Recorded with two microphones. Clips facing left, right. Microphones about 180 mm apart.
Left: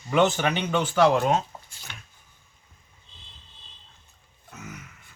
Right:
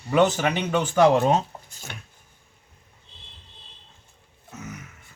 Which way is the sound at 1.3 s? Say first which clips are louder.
Right 2 dB; 45° right (ahead or behind).